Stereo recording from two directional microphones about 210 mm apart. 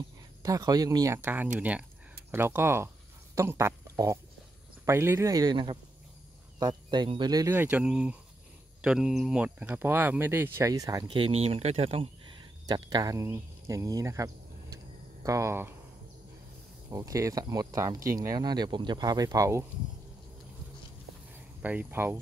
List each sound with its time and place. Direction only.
0.4 s speech: 20° right (ahead or behind)
11.1 s speech: 25° right (ahead or behind); by 15.7 s 10° right (ahead or behind)
16.9 s speech: 15° right (ahead or behind)
21.5 s speech: 5° right (ahead or behind)